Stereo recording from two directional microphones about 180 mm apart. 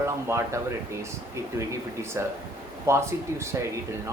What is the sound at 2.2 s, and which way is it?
Speech, 15° right (ahead or behind).